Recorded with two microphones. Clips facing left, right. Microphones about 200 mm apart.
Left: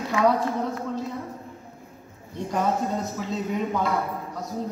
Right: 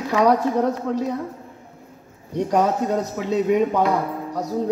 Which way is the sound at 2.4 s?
70° right (ahead or behind).